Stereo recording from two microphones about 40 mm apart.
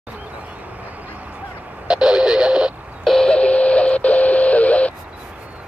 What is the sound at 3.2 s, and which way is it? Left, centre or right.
Radio, left.